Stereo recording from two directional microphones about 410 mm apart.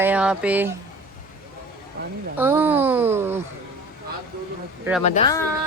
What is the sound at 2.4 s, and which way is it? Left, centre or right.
Speech, centre.